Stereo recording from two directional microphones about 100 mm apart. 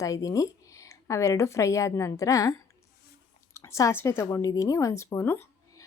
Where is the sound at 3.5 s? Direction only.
30° left (ahead or behind).